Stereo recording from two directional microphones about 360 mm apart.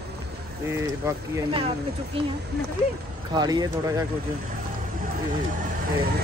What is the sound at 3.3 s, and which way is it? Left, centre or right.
Speech, centre.